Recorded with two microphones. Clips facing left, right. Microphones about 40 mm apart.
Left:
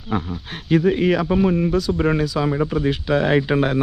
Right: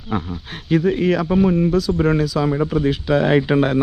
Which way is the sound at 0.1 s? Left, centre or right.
Centre.